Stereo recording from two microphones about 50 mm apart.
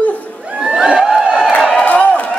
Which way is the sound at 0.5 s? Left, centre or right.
Centre.